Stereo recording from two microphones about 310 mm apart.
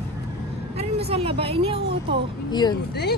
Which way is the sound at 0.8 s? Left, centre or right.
Centre.